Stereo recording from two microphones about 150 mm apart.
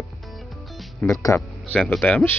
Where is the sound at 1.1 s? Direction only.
20° left (ahead or behind).